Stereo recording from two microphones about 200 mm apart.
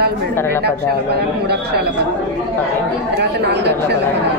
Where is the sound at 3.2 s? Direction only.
55° right (ahead or behind).